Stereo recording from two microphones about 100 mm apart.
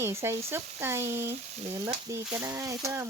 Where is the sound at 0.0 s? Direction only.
25° right (ahead or behind).